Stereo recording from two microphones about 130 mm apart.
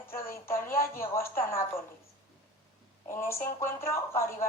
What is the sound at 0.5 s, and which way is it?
Speech, 90° left.